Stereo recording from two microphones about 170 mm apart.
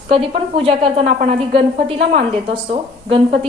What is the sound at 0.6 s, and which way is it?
A woman's voice, 35° right (ahead or behind).